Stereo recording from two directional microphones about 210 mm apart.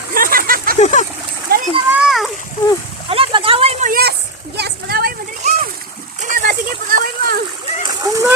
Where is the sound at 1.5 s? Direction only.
45° right (ahead or behind).